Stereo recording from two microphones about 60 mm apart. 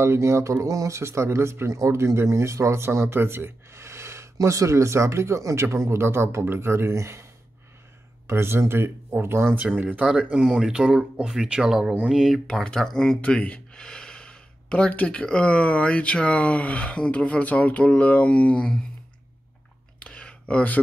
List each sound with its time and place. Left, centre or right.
0.0 s speech: right
8.3 s speech: right
9.6 s speech: right
10.1 s speech: centre
12.6 s speech: centre
20.1 s a sound: centre